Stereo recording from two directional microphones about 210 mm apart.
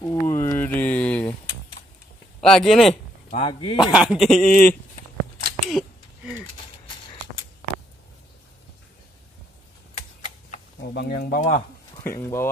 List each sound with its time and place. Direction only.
0.0 s a sound: 15° left (ahead or behind)
2.4 s speech: centre (ahead or behind)
3.3 s speech: 25° left (ahead or behind)
3.9 s speech: 5° right (ahead or behind)
4.4 s speech: 40° left (ahead or behind)
5.7 s a sound: centre (ahead or behind)
10.9 s speech: 50° left (ahead or behind)
11.9 s speech: 10° left (ahead or behind)